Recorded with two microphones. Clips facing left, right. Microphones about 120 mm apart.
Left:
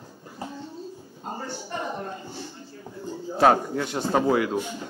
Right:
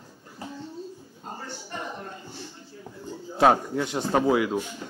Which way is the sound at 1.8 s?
25° left (ahead or behind).